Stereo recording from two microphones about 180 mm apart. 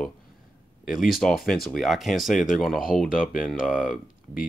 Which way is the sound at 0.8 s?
Centre (ahead or behind).